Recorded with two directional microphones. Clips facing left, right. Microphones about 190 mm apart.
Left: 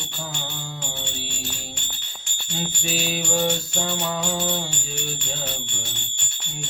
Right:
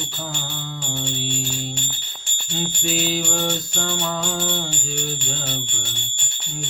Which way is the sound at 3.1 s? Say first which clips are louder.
Even; 5° left (ahead or behind).